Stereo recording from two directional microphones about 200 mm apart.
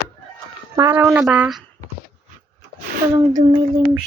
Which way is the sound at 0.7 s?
15° right (ahead or behind).